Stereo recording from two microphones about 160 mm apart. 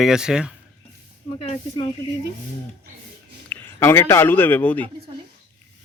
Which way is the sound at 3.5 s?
15° left (ahead or behind).